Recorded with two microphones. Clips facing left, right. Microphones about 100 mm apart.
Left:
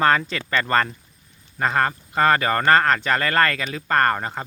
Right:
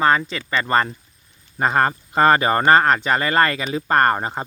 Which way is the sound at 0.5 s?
20° right (ahead or behind).